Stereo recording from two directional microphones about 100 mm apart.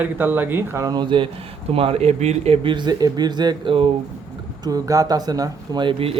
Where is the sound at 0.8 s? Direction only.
50° right (ahead or behind).